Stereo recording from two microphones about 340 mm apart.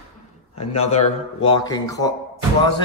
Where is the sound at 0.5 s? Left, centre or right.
Centre.